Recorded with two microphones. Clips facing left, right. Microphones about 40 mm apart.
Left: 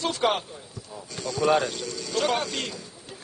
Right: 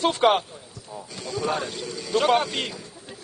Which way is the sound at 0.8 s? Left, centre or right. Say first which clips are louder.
Even; centre.